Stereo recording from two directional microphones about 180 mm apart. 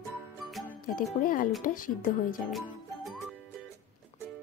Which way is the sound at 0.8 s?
50° left (ahead or behind).